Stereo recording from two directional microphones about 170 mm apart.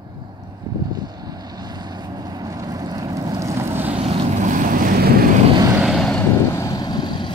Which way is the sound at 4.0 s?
40° right (ahead or behind).